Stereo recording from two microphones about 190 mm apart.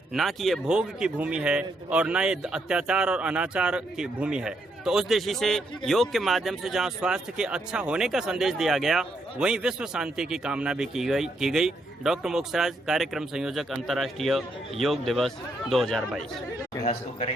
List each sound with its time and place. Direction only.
0.1 s a man's voice: centre (ahead or behind)
16.8 s a man's voice: 40° left (ahead or behind)